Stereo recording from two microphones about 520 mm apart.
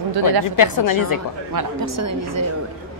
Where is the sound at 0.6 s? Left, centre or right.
Left.